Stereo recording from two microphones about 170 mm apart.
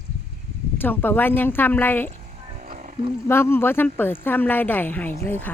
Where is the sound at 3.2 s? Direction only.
15° left (ahead or behind).